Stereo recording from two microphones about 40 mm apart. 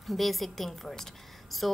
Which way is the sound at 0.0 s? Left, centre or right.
Centre.